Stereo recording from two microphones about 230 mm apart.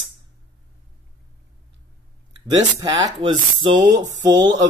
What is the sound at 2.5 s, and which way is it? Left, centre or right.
Speech, centre.